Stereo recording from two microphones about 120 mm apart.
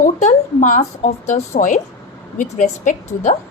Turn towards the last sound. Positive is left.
turn(degrees=90)